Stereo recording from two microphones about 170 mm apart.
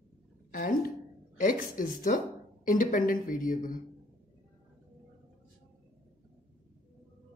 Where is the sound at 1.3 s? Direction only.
50° left (ahead or behind).